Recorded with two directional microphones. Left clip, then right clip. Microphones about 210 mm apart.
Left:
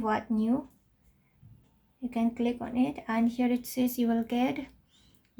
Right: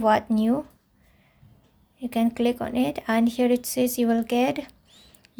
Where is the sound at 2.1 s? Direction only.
40° right (ahead or behind).